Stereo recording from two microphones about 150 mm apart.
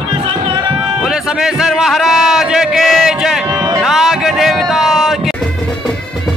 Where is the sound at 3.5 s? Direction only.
25° right (ahead or behind).